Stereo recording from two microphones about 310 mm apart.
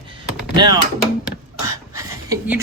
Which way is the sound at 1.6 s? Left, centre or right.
Centre.